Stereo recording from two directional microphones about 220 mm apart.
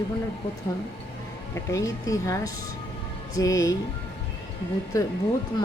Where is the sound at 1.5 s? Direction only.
15° left (ahead or behind).